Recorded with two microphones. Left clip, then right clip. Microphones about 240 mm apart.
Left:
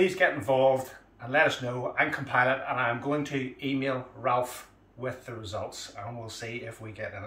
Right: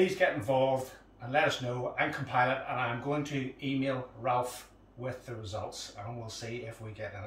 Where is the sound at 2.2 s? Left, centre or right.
Centre.